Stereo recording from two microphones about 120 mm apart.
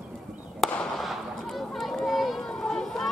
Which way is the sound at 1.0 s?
Centre (ahead or behind).